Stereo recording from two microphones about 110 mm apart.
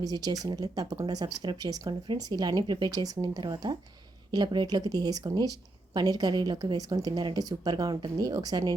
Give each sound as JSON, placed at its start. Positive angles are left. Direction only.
{"t": 0.0, "sound": "speech", "side_deg": -35}